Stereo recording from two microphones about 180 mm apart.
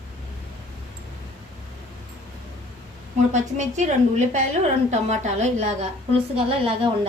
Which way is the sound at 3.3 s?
40° right (ahead or behind).